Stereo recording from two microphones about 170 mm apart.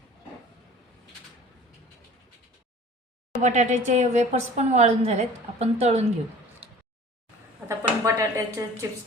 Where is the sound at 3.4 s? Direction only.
45° right (ahead or behind).